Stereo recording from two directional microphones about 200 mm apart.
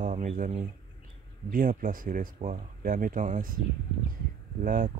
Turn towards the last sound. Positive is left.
turn(degrees=-40)  # may be behind; listen again after turning